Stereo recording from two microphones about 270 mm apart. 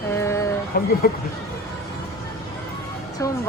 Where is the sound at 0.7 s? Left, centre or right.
Left.